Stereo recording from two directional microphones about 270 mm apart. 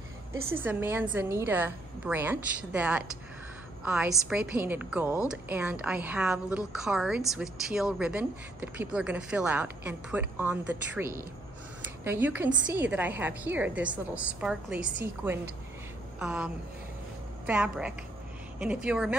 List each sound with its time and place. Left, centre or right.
0.5 s a woman's voice: centre